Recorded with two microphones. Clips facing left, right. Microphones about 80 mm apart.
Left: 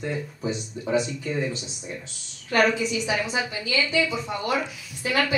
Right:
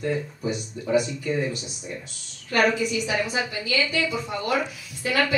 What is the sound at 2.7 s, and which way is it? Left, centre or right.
A woman's voice, left.